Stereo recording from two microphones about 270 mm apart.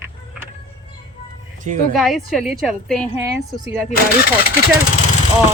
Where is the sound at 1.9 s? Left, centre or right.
Centre.